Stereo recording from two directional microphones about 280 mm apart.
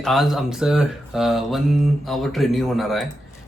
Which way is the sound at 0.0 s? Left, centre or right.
Centre.